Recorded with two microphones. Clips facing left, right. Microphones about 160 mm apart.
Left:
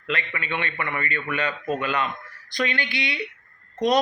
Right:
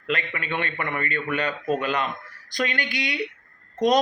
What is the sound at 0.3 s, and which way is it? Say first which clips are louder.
A man's voice: right 1 dB; 45° right (ahead or behind).